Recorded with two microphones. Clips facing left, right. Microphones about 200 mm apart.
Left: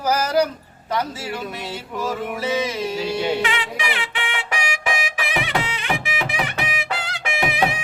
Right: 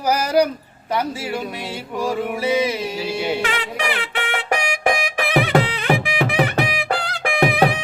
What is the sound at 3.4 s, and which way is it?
Speech, 45° right (ahead or behind).